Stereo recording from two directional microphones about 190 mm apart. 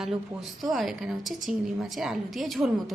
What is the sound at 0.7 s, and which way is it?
A woman's voice, centre (ahead or behind).